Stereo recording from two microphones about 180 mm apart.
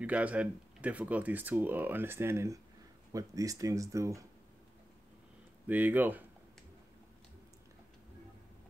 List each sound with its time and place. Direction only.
0.0 s speech: 5° right (ahead or behind)
5.7 s speech: 10° right (ahead or behind)